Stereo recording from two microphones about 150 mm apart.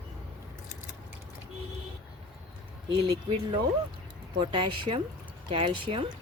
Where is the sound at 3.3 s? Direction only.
35° right (ahead or behind).